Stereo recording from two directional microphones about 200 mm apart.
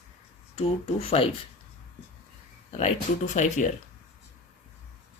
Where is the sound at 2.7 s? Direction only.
35° left (ahead or behind).